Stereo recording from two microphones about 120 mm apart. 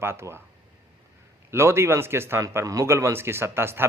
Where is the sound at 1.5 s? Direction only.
20° right (ahead or behind).